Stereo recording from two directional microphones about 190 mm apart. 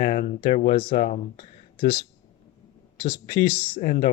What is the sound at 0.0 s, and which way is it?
Speech, 40° left (ahead or behind).